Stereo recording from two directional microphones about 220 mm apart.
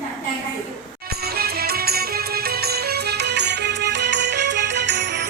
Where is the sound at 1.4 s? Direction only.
45° right (ahead or behind).